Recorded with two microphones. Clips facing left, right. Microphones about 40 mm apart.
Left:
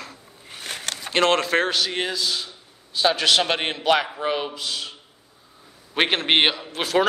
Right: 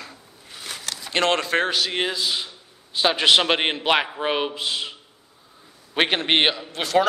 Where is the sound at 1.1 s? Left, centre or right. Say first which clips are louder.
Left 2 dB; centre; by 4.9 s right.